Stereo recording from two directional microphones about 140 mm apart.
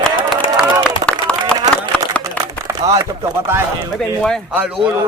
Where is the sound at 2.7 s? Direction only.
20° right (ahead or behind).